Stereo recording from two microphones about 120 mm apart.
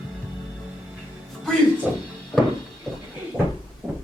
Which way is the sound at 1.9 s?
10° right (ahead or behind).